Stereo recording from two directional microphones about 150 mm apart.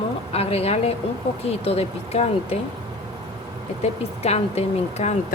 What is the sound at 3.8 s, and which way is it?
Speech, 45° left (ahead or behind).